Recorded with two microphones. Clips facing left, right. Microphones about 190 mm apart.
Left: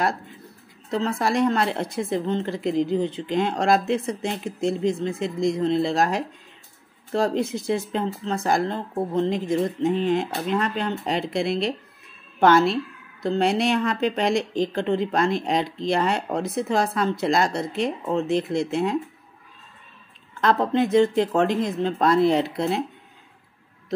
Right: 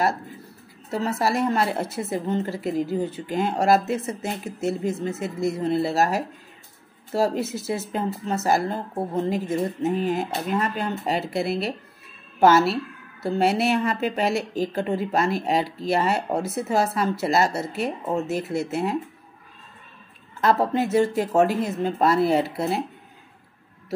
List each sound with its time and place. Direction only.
0.8 s a woman's voice: 5° right (ahead or behind)
20.3 s a woman's voice: 5° right (ahead or behind)